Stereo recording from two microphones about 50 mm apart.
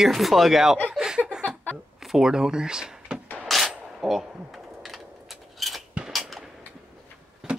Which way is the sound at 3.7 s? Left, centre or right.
Centre.